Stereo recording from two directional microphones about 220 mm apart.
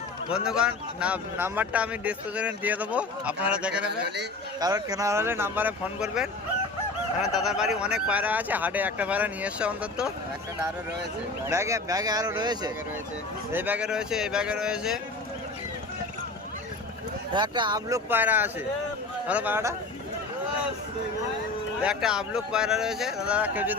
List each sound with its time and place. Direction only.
0.3 s a man's voice: 5° right (ahead or behind)
4.0 s a man's voice: 50° right (ahead or behind)
4.6 s a man's voice: 15° right (ahead or behind)
11.4 s a man's voice: 10° right (ahead or behind)
17.3 s speech: 20° right (ahead or behind)
21.8 s a man's voice: 5° right (ahead or behind)